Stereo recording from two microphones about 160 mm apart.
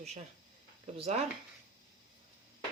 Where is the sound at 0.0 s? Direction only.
45° right (ahead or behind).